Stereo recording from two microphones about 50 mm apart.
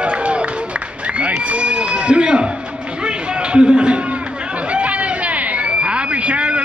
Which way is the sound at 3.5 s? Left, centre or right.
Centre.